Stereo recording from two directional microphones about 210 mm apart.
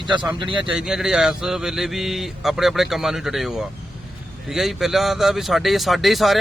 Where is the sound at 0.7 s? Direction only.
5° right (ahead or behind).